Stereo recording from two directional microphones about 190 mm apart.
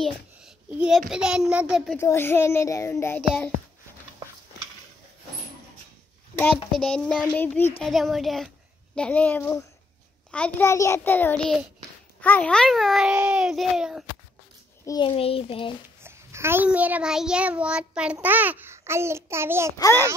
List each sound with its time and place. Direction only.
0.0 s a child's voice: 5° right (ahead or behind)
2.0 s a child's voice: 10° left (ahead or behind)
6.3 s a child's voice: 5° left (ahead or behind)
14.9 s a child's voice: 25° left (ahead or behind)
16.0 s a child's voice: 15° right (ahead or behind)
19.8 s a child's voice: 10° left (ahead or behind)